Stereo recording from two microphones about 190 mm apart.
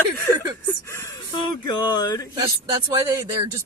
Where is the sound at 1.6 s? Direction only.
20° left (ahead or behind).